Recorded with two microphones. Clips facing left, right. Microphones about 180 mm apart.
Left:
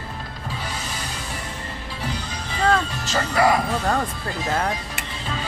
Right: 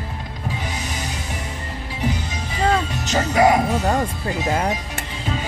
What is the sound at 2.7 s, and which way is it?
Music, 20° right (ahead or behind).